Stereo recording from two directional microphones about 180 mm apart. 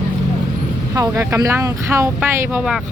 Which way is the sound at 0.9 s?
20° right (ahead or behind).